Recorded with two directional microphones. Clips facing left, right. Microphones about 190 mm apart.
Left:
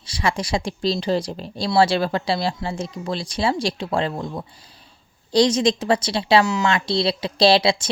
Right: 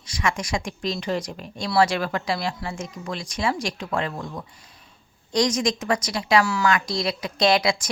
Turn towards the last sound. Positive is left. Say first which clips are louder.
# left 4 dB
turn(degrees=30)  # may be behind; listen again after turning